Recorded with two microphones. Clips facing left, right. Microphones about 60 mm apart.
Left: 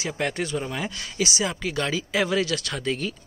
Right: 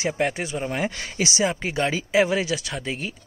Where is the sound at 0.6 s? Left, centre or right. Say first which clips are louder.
Right 4 dB; right.